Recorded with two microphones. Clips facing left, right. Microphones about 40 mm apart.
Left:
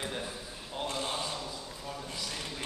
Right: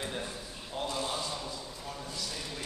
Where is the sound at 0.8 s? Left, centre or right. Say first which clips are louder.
Even; left.